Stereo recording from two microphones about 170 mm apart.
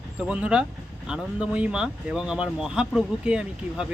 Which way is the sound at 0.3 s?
5° right (ahead or behind).